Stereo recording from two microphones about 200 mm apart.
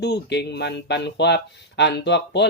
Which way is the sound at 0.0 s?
55° left (ahead or behind).